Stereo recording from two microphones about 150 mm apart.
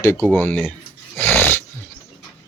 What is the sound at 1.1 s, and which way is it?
Dog, 15° left (ahead or behind).